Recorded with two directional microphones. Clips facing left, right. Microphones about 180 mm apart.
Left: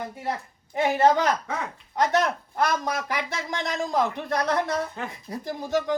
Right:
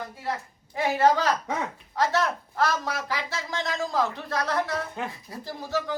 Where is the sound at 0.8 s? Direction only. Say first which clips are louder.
Left 2 dB; 20° left (ahead or behind).